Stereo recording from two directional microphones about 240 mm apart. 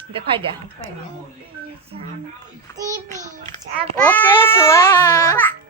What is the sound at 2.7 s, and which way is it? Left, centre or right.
Speech, centre.